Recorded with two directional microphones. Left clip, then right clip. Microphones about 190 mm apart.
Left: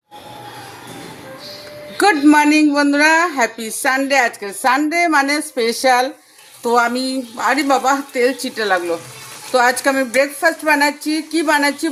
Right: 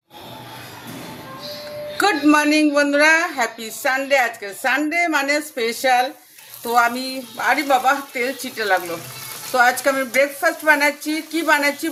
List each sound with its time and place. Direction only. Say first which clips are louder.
2.0 s a woman's voice: left 4 dB; 25° left (ahead or behind)